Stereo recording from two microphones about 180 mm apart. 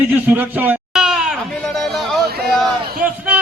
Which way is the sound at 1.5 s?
Centre (ahead or behind).